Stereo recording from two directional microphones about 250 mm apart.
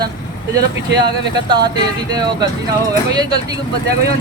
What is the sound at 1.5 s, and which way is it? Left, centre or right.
Speech, centre.